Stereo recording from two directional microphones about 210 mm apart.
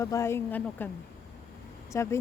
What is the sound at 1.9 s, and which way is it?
Speech, 15° left (ahead or behind).